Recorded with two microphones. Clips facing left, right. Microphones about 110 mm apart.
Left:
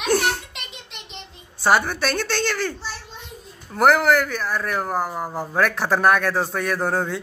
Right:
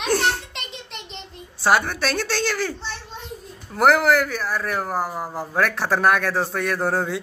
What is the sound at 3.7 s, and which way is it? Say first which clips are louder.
Speech: even; centre (ahead or behind).